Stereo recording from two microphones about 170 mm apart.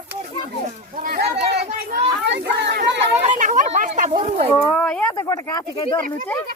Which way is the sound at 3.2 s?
45° right (ahead or behind).